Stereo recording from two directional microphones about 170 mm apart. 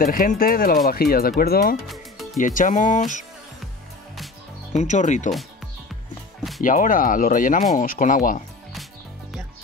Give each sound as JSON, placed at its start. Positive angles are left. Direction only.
{"t": 0.0, "sound": "speech", "side_deg": 55}
{"t": 2.4, "sound": "speech", "side_deg": 50}
{"t": 4.7, "sound": "speech", "side_deg": 45}
{"t": 6.6, "sound": "speech", "side_deg": 50}